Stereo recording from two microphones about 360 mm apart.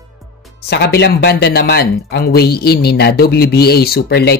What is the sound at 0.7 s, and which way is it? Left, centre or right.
Speech, left.